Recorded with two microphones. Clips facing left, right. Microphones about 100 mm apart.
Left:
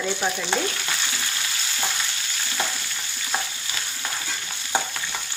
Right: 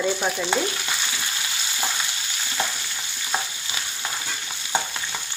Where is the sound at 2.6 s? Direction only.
5° left (ahead or behind).